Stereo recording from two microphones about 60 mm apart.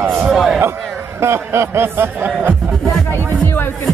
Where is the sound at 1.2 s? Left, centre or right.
Right.